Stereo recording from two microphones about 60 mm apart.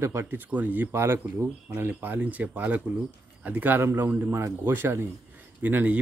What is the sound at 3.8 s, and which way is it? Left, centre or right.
Speech, right.